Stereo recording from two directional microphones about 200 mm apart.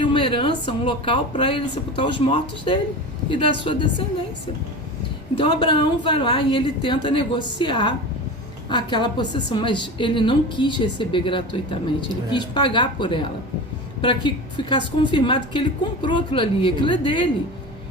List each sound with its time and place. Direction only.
0.0 s a woman's voice: 25° left (ahead or behind)
5.4 s a woman's voice: 25° left (ahead or behind)